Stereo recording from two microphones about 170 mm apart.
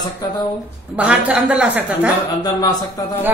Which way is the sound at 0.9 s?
5° right (ahead or behind).